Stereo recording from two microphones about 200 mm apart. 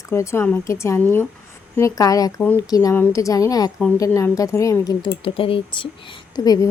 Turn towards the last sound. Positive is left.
turn(degrees=20)  # may be behind; listen again after turning